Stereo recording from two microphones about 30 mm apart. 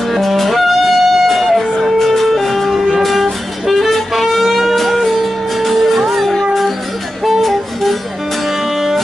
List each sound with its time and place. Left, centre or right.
0.4 s music: centre